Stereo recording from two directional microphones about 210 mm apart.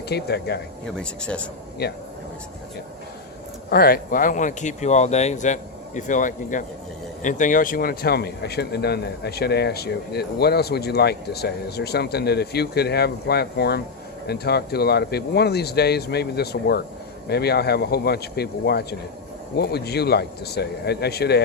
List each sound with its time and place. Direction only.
0.1 s speech: 50° left (ahead or behind)
0.9 s speech: 5° left (ahead or behind)
1.8 s speech: 50° left (ahead or behind)
3.7 s speech: 45° left (ahead or behind)